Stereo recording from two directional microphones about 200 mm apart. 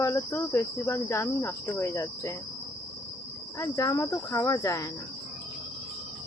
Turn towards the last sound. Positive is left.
turn(degrees=15)  # may be behind; listen again after turning